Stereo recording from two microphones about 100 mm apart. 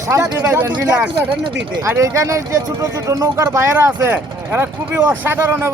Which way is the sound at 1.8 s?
30° right (ahead or behind).